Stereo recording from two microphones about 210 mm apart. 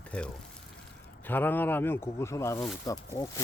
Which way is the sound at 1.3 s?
10° left (ahead or behind).